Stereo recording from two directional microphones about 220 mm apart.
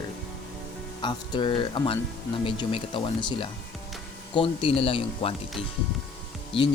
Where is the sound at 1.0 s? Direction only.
20° left (ahead or behind).